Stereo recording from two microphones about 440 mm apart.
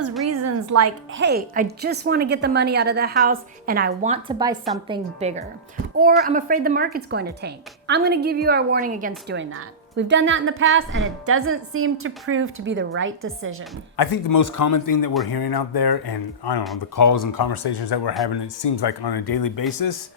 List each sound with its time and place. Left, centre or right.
0.3 s a woman's voice: right
13.9 s a man's voice: left
16.9 s speech: left